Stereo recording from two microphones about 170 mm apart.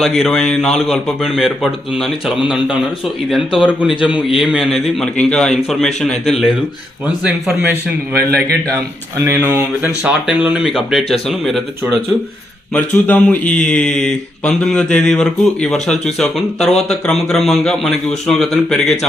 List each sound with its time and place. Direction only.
0.0 s speech: centre (ahead or behind)
3.6 s speech: 5° right (ahead or behind)
8.1 s a man's voice: 65° right (ahead or behind)
8.7 s speech: 15° right (ahead or behind); by 11.6 s centre (ahead or behind)
12.7 s speech: 10° left (ahead or behind)